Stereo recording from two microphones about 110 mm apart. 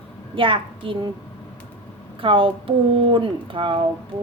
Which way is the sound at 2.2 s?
50° right (ahead or behind).